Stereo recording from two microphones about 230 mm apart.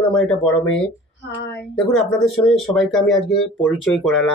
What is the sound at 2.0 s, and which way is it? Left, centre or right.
Speech, centre.